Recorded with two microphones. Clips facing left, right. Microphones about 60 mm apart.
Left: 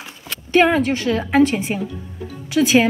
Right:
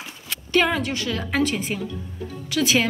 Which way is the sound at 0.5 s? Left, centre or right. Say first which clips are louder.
Left 6 dB; left.